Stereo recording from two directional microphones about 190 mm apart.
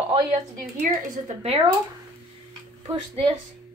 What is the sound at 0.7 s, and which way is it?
Speech, 40° right (ahead or behind).